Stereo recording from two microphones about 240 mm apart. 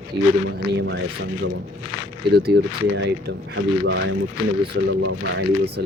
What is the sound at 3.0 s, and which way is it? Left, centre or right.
Speech, right.